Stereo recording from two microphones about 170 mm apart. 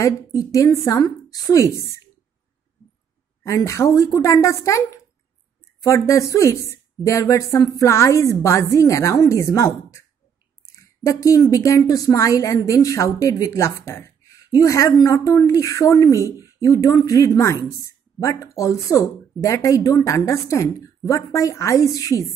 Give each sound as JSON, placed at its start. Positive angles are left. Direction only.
{"t": 0.0, "sound": "a woman's voice", "side_deg": 20}
{"t": 3.4, "sound": "a woman's voice", "side_deg": 20}